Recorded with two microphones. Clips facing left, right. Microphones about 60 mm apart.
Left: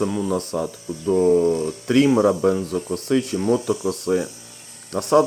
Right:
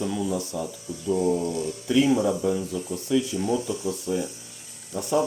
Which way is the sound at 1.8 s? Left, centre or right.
Left.